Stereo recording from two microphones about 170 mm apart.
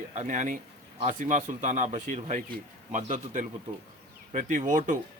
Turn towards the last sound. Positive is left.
turn(degrees=-50)  # may be behind; listen again after turning